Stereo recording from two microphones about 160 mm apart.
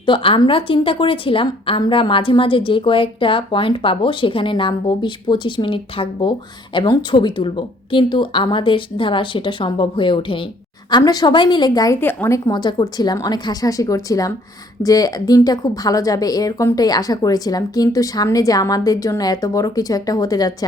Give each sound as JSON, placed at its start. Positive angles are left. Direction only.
{"t": 0.0, "sound": "a woman's voice", "side_deg": 35}
{"t": 11.9, "sound": "a woman's voice", "side_deg": 15}
{"t": 12.5, "sound": "speech", "side_deg": 25}